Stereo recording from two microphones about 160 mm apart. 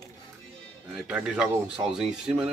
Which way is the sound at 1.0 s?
5° right (ahead or behind).